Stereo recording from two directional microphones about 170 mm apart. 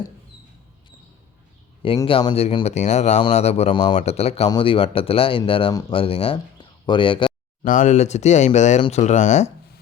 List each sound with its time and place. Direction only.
2.0 s speech: 30° left (ahead or behind)
7.6 s speech: 50° left (ahead or behind)